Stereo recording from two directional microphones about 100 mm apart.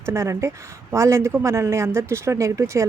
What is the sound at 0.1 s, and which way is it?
Speech, 30° right (ahead or behind).